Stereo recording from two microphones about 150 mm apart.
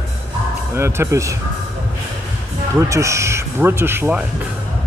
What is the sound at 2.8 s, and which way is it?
Speech, 20° right (ahead or behind).